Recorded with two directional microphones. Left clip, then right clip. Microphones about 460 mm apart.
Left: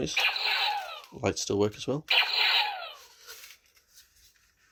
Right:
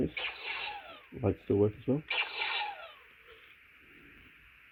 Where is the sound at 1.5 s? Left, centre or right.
Left.